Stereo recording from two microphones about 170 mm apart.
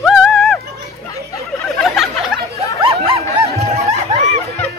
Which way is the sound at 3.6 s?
40° right (ahead or behind).